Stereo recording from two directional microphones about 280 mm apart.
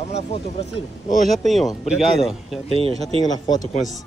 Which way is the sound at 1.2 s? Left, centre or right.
Centre.